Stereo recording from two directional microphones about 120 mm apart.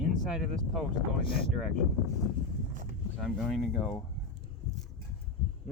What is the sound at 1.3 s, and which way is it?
Speech, 50° left (ahead or behind).